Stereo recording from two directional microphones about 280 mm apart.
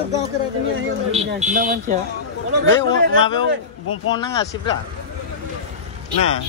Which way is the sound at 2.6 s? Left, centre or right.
Right.